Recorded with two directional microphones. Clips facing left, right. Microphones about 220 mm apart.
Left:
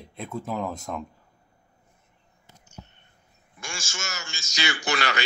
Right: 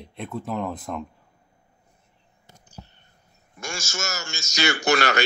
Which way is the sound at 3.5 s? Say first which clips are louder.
Right 5 dB; 40° right (ahead or behind).